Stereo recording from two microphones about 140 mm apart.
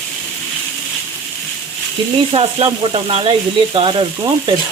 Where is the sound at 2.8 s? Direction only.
40° right (ahead or behind).